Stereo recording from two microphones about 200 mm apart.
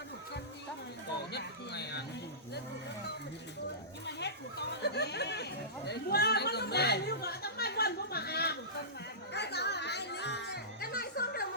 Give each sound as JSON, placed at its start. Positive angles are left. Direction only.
{"t": 1.3, "sound": "a sound", "side_deg": 55}
{"t": 4.8, "sound": "chatter", "side_deg": 55}
{"t": 9.3, "sound": "music", "side_deg": 55}